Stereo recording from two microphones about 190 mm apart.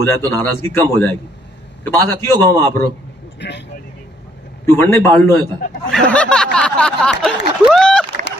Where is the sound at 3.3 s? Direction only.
65° left (ahead or behind).